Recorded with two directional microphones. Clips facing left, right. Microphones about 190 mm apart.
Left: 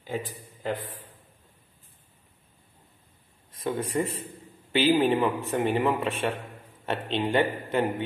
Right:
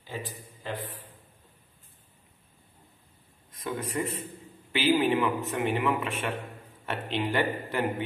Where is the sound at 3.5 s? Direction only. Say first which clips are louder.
Left 4 dB; 30° left (ahead or behind).